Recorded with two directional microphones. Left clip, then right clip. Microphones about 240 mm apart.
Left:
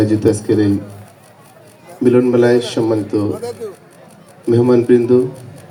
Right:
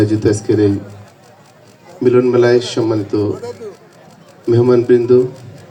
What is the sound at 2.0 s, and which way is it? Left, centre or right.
A man's voice, centre.